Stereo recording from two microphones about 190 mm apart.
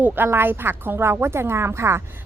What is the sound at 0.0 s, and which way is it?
A woman's voice, 10° right (ahead or behind).